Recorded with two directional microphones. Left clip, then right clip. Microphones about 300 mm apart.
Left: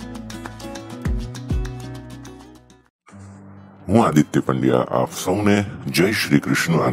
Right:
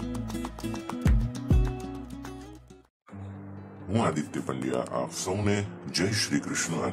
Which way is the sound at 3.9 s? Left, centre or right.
Left.